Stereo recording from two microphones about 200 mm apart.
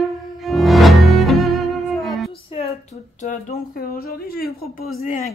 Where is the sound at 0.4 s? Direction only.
Centre (ahead or behind).